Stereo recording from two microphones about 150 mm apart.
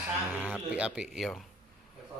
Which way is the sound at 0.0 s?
10° right (ahead or behind).